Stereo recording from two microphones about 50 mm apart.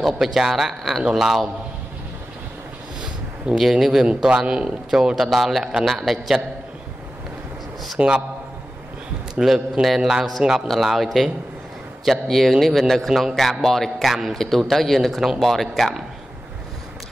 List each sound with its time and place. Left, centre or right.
0.0 s a man's voice: centre
3.5 s a man's voice: centre
8.0 s a man's voice: right
9.4 s a man's voice: centre